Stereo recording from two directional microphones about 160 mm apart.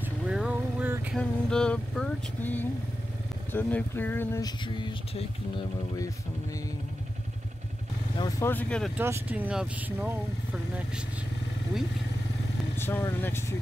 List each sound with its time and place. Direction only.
0.3 s vehicle: 5° right (ahead or behind)
1.1 s speech: 5° left (ahead or behind); by 5.2 s 30° left (ahead or behind)
8.2 s speech: 20° left (ahead or behind)
8.9 s speech: 15° right (ahead or behind)
12.7 s speech: 15° left (ahead or behind)